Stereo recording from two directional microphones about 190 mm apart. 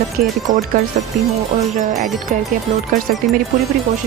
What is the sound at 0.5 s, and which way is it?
Speech, 45° right (ahead or behind).